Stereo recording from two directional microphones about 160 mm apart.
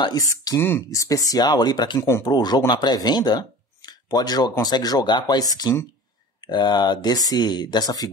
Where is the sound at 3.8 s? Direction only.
25° left (ahead or behind).